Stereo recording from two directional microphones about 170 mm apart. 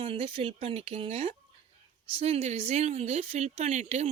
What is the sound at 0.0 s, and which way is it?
Speech, 30° right (ahead or behind).